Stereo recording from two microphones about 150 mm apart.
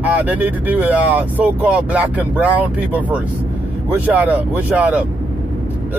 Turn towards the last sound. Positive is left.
turn(degrees=-10)  # may be behind; listen again after turning